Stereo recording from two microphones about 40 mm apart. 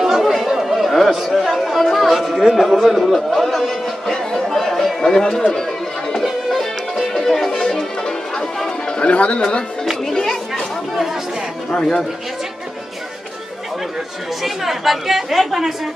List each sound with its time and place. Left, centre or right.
0.0 s chatter: centre
1.2 s a sound: centre
2.5 s a woman's voice: centre
5.5 s chatter: centre
6.5 s music: centre
9.0 s speech: left
11.7 s speech: centre
14.4 s a woman's voice: centre